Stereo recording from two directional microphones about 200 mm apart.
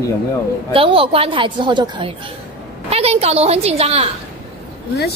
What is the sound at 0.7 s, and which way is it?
A woman's voice, 25° right (ahead or behind).